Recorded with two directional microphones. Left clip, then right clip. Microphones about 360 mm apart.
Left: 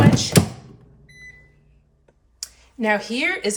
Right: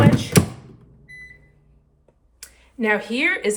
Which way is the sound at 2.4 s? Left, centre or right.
Centre.